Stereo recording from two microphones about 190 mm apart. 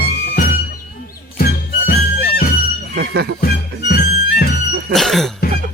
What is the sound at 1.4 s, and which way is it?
Music, 55° left (ahead or behind).